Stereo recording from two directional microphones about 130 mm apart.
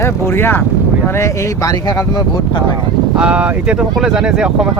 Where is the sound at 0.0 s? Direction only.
15° left (ahead or behind).